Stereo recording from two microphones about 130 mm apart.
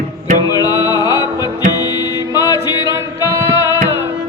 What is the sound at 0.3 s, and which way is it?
Music, 30° left (ahead or behind).